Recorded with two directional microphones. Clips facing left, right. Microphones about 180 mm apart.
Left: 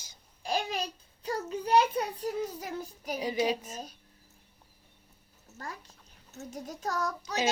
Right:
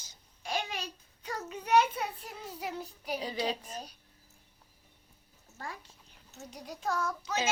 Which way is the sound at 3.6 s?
45° left (ahead or behind).